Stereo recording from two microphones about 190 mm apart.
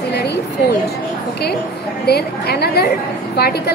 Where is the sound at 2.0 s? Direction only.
55° left (ahead or behind).